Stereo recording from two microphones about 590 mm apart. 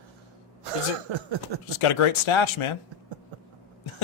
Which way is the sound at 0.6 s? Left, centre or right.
Right.